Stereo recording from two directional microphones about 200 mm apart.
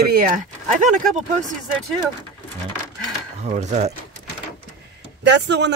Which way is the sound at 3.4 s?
35° right (ahead or behind).